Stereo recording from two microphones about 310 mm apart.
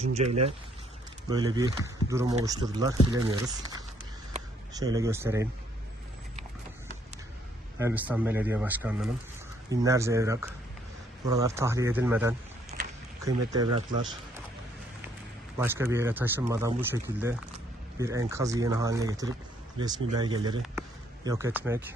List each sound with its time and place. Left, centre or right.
0.0 s speech: right
1.3 s speech: centre
7.8 s speech: centre
12.7 s a sound: right
13.2 s speech: centre
15.5 s speech: centre